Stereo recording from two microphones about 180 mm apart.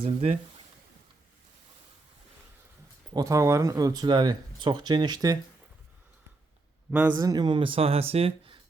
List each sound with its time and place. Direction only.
0.0 s speech: 35° right (ahead or behind)
3.1 s speech: 20° right (ahead or behind)
7.2 s speech: 20° right (ahead or behind)